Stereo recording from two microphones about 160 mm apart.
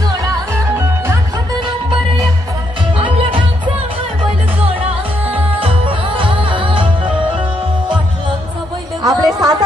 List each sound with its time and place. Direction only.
0.2 s music: 20° right (ahead or behind)
3.0 s music: 35° right (ahead or behind)
5.6 s music: 35° right (ahead or behind)
9.0 s a sound: 25° right (ahead or behind)